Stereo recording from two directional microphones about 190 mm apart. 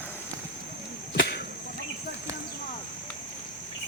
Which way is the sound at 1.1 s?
60° left (ahead or behind).